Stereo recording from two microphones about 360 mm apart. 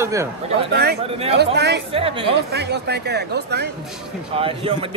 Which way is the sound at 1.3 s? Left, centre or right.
Right.